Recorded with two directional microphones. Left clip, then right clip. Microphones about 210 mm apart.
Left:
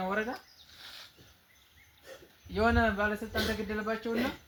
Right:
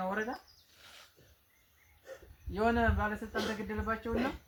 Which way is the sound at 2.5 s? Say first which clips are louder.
Left 3 dB; 30° left (ahead or behind).